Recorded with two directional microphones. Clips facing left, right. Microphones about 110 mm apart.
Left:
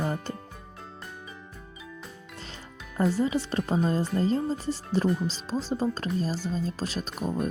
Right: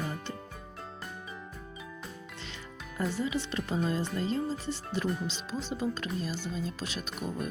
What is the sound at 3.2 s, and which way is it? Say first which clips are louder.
Speech: left 6 dB; 40° left (ahead or behind).